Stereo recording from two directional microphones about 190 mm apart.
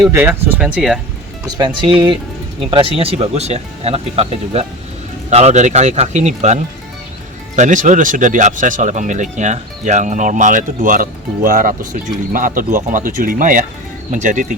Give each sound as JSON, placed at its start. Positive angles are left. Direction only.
{"t": 0.1, "sound": "speech", "side_deg": -10}
{"t": 1.5, "sound": "speech", "side_deg": -20}